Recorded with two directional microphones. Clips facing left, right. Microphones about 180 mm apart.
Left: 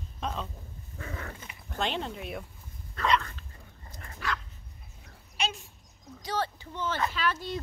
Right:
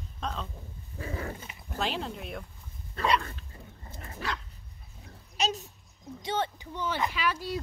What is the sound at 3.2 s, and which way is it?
Dog, 25° right (ahead or behind).